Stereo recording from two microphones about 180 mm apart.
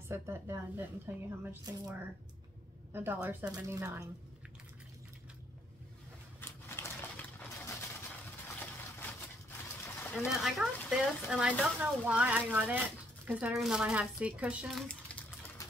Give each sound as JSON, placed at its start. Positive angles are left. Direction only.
{"t": 0.1, "sound": "a woman's voice", "side_deg": -15}
{"t": 6.4, "sound": "a sound", "side_deg": 10}
{"t": 9.8, "sound": "pigeon", "side_deg": 10}
{"t": 10.1, "sound": "a woman's voice", "side_deg": 0}